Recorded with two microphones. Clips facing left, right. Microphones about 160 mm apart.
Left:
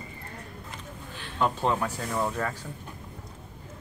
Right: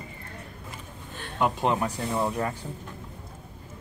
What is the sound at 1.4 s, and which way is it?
Speech, 15° right (ahead or behind).